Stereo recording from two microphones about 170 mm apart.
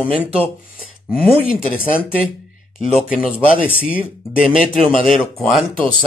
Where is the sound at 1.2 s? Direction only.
10° left (ahead or behind).